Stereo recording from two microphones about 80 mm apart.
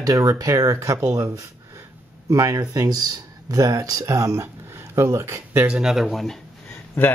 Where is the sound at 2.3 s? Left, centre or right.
Right.